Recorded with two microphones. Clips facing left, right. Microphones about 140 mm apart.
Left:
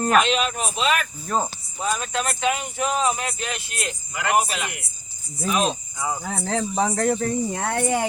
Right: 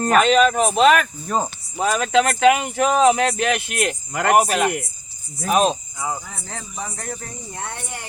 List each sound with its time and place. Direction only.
0.2 s speech: 45° right (ahead or behind)
1.3 s speech: 5° right (ahead or behind)
1.8 s speech: 85° right; by 5.7 s 45° right (ahead or behind)
6.2 s speech: 70° left (ahead or behind)
6.7 s speech: 85° left